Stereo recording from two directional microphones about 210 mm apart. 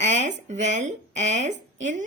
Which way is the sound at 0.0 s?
35° right (ahead or behind).